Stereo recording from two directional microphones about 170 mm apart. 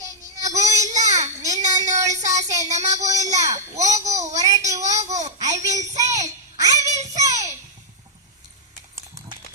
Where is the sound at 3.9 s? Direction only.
45° right (ahead or behind).